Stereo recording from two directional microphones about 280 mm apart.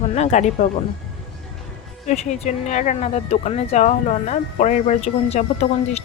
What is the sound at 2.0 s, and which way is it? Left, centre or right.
Speech, left.